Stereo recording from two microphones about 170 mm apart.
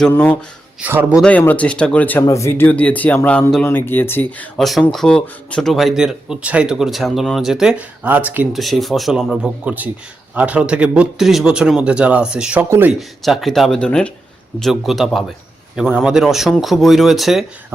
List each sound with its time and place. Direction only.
0.0 s speech: 10° left (ahead or behind)
0.8 s speech: 10° right (ahead or behind)
1.2 s speech: 10° left (ahead or behind); by 12.9 s 10° right (ahead or behind)
13.0 s speech: centre (ahead or behind)